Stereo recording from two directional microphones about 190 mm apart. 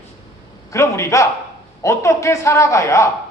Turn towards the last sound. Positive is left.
turn(degrees=15)  # may be behind; listen again after turning